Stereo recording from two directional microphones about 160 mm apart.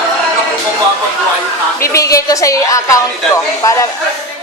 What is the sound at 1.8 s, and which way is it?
A woman's voice, 20° left (ahead or behind).